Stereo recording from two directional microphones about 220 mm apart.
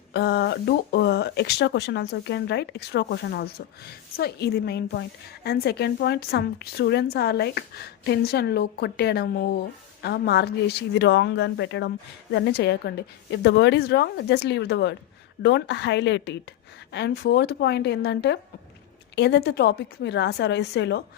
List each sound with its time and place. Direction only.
0.1 s speech: 50° left (ahead or behind)